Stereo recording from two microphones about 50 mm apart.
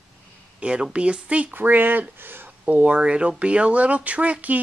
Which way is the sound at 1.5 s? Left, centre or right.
Right.